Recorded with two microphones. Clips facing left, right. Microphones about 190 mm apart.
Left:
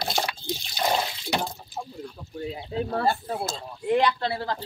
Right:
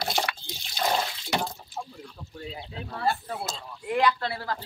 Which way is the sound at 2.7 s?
40° left (ahead or behind).